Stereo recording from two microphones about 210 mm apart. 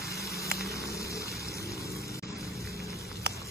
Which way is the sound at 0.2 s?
50° right (ahead or behind).